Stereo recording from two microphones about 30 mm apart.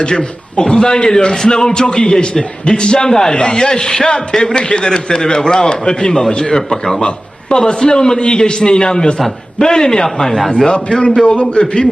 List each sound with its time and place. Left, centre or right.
0.0 s a man's voice: left
3.1 s a man's voice: centre
3.3 s a man's voice: left
7.5 s a man's voice: left